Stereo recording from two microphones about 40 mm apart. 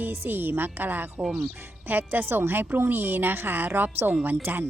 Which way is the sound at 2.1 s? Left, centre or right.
Right.